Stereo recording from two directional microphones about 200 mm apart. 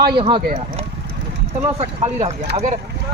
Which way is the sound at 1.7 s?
35° right (ahead or behind).